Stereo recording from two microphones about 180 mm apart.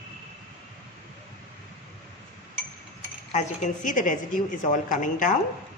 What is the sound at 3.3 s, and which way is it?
A woman's voice, 45° left (ahead or behind).